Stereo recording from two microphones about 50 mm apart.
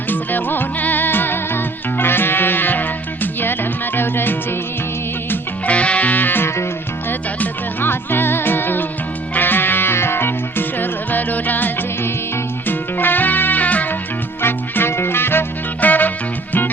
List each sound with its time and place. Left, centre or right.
0.1 s music: left
5.6 s music: left
14.4 s music: left
15.8 s music: left